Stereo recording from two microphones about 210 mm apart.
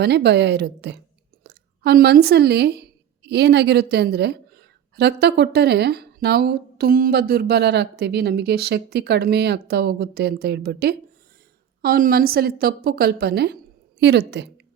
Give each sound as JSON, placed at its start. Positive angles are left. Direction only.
{"t": 0.0, "sound": "a woman's voice", "side_deg": -55}